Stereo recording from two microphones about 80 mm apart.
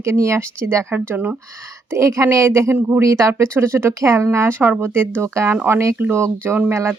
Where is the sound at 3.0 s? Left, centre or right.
Right.